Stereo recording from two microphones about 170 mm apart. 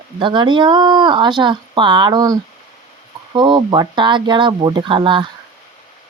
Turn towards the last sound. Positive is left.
turn(degrees=-30)  # may be behind; listen again after turning